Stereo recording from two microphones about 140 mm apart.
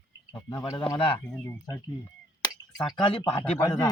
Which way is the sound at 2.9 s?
40° left (ahead or behind).